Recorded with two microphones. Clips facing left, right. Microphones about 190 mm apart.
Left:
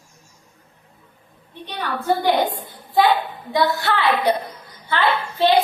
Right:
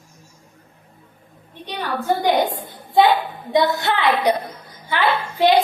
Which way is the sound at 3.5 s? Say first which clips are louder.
Right 2 dB; 20° right (ahead or behind).